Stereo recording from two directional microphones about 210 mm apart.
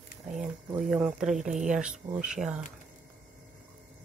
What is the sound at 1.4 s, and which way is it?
Speech, 35° right (ahead or behind).